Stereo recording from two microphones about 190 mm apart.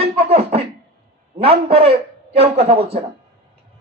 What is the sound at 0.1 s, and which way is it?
Beatboxing, 30° right (ahead or behind).